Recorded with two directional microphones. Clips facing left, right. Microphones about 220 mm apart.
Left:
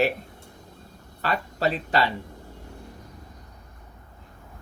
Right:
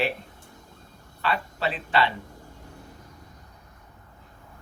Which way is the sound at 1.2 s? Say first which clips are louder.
Left 2 dB; 40° left (ahead or behind).